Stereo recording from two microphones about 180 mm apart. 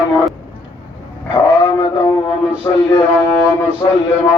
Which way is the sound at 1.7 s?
15° left (ahead or behind).